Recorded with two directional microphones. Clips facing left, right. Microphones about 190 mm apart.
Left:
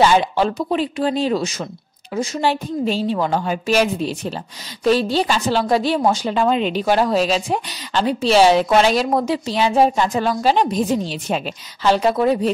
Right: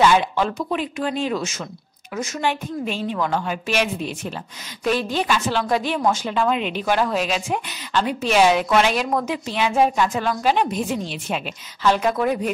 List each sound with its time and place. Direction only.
0.0 s a woman's voice: 35° left (ahead or behind)